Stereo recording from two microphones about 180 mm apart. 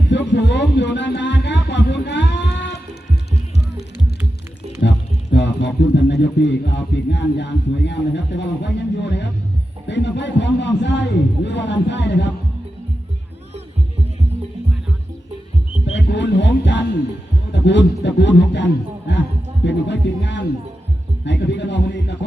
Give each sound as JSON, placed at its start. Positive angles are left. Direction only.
{"t": 0.1, "sound": "music", "side_deg": 75}
{"t": 4.8, "sound": "speech", "side_deg": 75}
{"t": 15.9, "sound": "a man's voice", "side_deg": 85}